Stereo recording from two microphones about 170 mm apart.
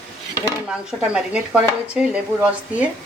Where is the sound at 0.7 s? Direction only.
5° right (ahead or behind).